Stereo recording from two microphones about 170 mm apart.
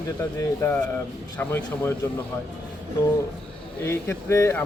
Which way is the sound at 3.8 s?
15° left (ahead or behind).